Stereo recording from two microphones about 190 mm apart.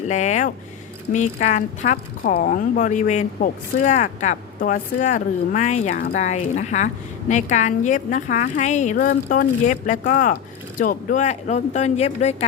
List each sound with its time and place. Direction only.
0.1 s a woman's voice: 40° left (ahead or behind)